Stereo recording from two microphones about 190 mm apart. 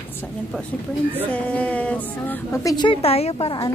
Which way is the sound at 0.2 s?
5° left (ahead or behind).